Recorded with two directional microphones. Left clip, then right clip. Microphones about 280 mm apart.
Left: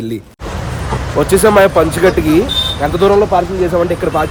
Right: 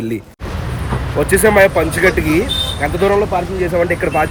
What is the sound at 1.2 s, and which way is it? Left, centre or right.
Speech, centre.